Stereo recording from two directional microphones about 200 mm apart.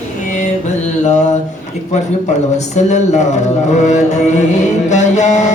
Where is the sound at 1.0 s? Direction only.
35° left (ahead or behind).